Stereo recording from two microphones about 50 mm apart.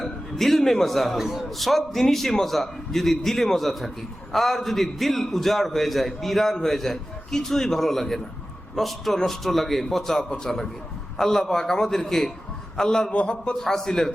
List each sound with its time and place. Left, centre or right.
0.0 s a man's voice: centre
10.2 s a man's voice: centre
13.5 s a man's voice: centre